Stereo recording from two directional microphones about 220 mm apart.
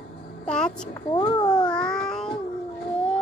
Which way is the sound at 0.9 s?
20° left (ahead or behind).